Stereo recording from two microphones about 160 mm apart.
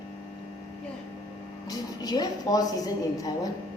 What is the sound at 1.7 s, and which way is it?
A woman's voice, 25° left (ahead or behind).